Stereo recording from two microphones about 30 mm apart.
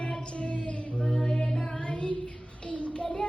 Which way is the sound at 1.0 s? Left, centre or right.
Centre.